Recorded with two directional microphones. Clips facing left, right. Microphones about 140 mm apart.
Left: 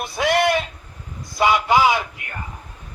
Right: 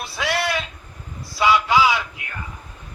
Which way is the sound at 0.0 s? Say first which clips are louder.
Left 6 dB; 50° left (ahead or behind).